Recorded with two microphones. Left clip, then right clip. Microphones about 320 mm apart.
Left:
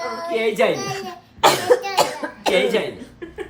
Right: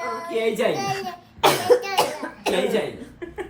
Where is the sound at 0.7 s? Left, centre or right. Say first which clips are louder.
Left 1 dB; centre.